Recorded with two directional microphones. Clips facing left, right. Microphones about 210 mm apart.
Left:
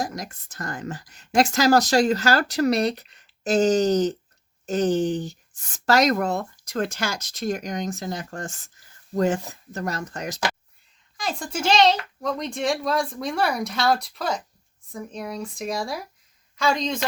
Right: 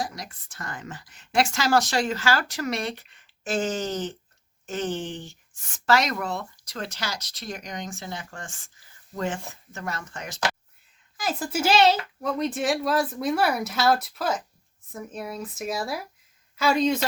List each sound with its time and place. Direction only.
0.0 s a woman's voice: 45° left (ahead or behind)
11.2 s a child's voice: 5° right (ahead or behind)